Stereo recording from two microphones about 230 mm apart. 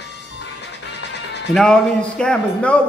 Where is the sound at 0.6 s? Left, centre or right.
Left.